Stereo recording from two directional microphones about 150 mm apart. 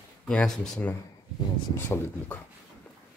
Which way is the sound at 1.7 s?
15° left (ahead or behind).